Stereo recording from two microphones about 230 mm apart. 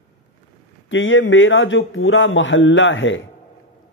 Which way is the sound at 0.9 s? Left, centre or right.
Left.